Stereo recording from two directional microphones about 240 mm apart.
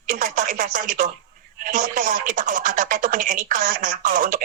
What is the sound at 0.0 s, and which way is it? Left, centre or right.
Speech, right.